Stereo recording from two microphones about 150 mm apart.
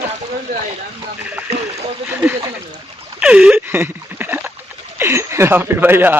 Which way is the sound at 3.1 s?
5° right (ahead or behind).